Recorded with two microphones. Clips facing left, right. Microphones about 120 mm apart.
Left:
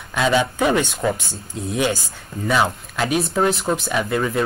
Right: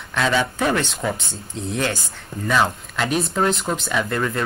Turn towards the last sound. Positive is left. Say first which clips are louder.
# left 1 dB
turn(degrees=15)  # may be behind; listen again after turning